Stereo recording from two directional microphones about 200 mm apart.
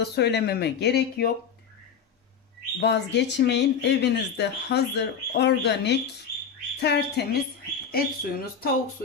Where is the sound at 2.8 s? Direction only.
60° left (ahead or behind).